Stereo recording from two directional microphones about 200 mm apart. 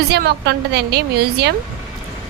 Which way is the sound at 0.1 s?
55° right (ahead or behind).